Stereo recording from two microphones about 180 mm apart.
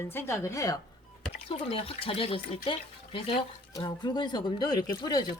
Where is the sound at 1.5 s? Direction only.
30° left (ahead or behind).